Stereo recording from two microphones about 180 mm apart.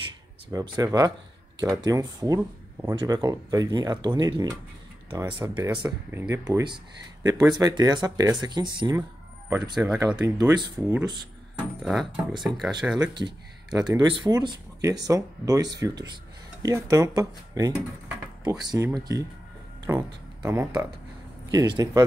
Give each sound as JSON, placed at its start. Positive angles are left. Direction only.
{"t": 0.5, "sound": "speech", "side_deg": -20}
{"t": 11.8, "sound": "speech", "side_deg": 0}
{"t": 13.0, "sound": "speech", "side_deg": -25}